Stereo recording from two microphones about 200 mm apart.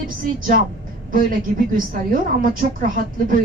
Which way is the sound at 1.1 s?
45° right (ahead or behind).